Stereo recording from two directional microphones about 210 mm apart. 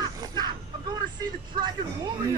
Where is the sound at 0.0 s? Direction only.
20° right (ahead or behind).